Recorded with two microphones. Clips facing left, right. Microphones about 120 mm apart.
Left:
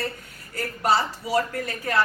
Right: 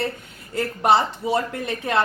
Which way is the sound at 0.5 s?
25° right (ahead or behind).